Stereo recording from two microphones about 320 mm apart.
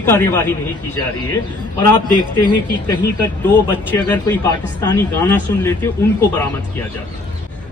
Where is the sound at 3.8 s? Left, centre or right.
Centre.